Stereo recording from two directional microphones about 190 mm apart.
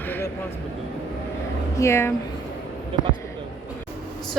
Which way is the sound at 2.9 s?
30° right (ahead or behind).